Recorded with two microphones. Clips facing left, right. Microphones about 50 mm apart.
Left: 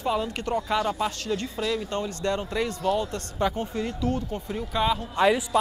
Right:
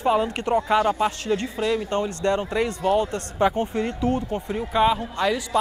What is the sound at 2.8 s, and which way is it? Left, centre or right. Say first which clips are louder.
Speech: right 5 dB; right.